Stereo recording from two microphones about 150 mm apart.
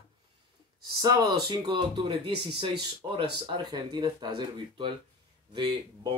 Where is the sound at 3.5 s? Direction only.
30° right (ahead or behind).